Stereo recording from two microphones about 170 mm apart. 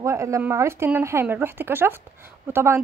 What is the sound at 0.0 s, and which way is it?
Speech, 15° right (ahead or behind).